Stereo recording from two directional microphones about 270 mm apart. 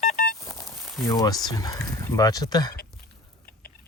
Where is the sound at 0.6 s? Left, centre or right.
Centre.